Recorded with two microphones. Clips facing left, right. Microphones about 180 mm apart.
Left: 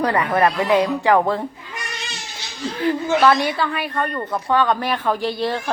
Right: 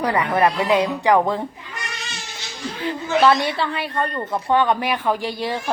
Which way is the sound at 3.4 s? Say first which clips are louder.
Left 1 dB; 25° right (ahead or behind).